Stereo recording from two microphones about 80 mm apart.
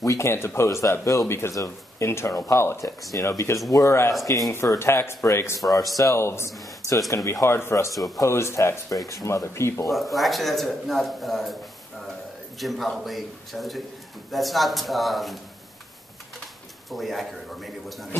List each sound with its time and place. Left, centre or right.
0.0 s speech: left
10.1 s a man's voice: centre
12.5 s a man's voice: centre
16.9 s a man's voice: centre